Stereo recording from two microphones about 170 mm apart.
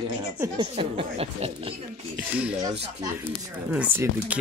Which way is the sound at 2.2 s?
5° right (ahead or behind).